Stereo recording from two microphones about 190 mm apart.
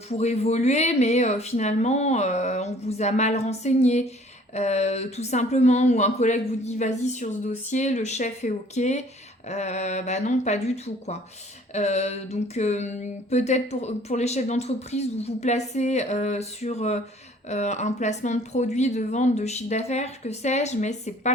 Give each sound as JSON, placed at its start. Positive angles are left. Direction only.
{"t": 0.1, "sound": "speech", "side_deg": 35}